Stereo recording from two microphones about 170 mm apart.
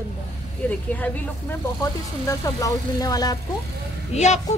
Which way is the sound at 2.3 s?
20° left (ahead or behind).